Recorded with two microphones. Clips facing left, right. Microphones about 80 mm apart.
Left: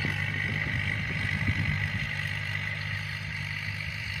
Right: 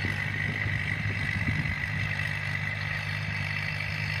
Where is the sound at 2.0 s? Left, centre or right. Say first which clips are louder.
Right 2 dB; right.